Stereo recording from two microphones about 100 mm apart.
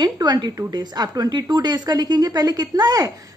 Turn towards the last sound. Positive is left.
turn(degrees=-40)  # may be behind; listen again after turning